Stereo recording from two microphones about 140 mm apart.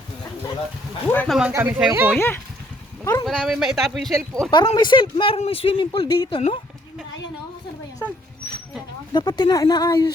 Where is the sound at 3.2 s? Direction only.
Centre (ahead or behind).